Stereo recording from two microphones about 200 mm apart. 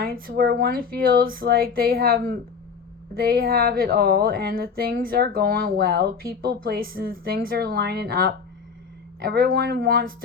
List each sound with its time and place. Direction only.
0.0 s speech: 50° right (ahead or behind)